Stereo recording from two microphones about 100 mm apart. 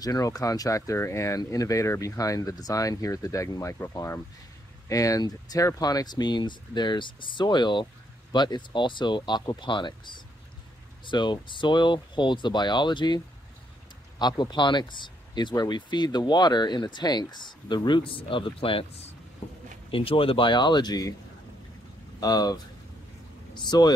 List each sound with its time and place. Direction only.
0.0 s speech: 40° left (ahead or behind)
22.2 s speech: 40° left (ahead or behind)